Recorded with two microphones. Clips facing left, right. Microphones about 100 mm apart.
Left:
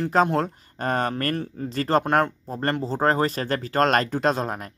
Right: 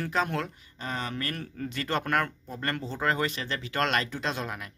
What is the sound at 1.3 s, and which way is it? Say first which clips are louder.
Speech: left 7 dB; 30° left (ahead or behind).